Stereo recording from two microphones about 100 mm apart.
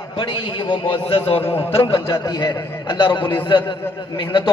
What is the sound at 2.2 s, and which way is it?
A man's voice, 50° left (ahead or behind).